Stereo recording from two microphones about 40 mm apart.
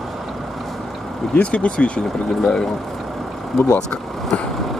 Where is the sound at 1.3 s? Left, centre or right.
Left.